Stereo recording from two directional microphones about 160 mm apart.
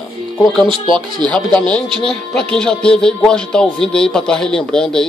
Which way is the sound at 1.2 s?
5° left (ahead or behind).